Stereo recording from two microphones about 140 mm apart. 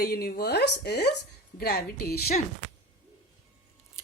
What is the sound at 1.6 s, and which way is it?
Speech, 90° left.